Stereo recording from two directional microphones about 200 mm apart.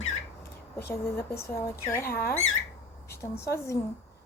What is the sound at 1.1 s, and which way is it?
Speech, 15° left (ahead or behind).